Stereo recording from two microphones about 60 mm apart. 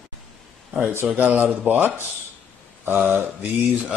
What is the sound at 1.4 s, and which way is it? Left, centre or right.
Speech, right.